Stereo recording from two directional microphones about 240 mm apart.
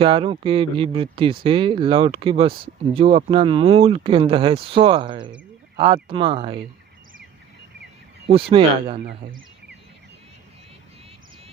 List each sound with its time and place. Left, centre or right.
0.0 s speech: right
8.3 s speech: right
9.0 s speech: right